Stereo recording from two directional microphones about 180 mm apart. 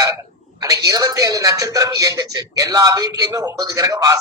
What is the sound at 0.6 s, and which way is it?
Speech, 20° right (ahead or behind).